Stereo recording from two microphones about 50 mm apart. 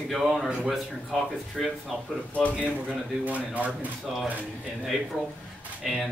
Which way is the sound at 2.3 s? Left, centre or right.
Left.